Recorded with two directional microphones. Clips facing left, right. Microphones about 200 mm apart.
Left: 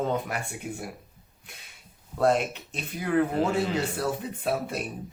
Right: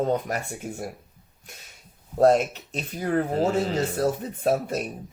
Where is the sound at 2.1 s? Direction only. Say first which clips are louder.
Right 5 dB; 40° right (ahead or behind).